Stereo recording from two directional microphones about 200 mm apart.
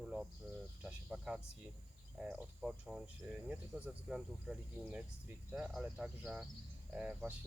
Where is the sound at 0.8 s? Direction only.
5° right (ahead or behind).